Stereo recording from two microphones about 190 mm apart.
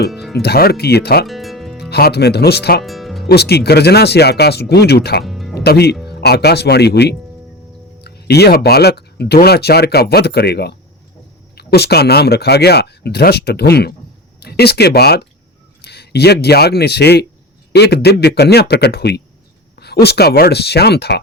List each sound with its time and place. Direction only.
0.1 s speech: centre (ahead or behind)
0.4 s speech: 55° left (ahead or behind)
1.3 s music: centre (ahead or behind)
1.9 s speech: 55° left (ahead or behind)
2.8 s music: centre (ahead or behind)
3.2 s speech: 60° left (ahead or behind)
5.2 s music: centre (ahead or behind)
5.5 s speech: 60° left (ahead or behind)